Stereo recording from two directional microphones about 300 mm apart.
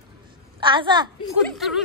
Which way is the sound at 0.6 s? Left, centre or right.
Centre.